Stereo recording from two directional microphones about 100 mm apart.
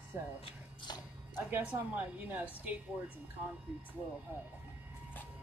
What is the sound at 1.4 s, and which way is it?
A woman's voice, 20° right (ahead or behind).